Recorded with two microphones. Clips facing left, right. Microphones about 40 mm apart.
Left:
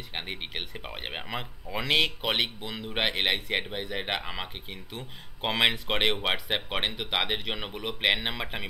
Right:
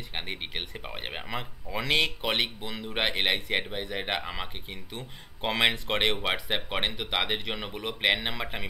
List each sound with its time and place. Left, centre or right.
0.1 s speech: centre